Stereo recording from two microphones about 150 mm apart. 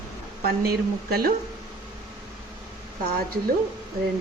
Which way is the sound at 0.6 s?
90° right.